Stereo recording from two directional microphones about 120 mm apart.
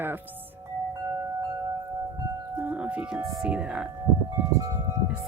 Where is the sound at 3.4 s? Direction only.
10° right (ahead or behind).